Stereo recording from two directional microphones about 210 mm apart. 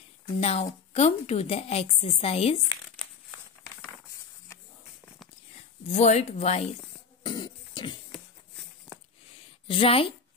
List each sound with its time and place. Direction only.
0.4 s a woman's voice: 30° left (ahead or behind)
5.9 s speech: 35° left (ahead or behind)
7.2 s speech: 20° left (ahead or behind)
9.7 s a woman's voice: 25° left (ahead or behind)